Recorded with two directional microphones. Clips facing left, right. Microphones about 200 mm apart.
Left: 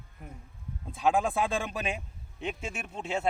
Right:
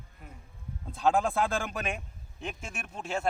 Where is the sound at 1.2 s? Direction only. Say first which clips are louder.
Even; centre (ahead or behind).